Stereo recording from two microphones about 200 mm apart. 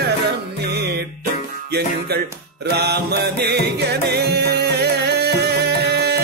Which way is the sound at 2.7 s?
55° right (ahead or behind).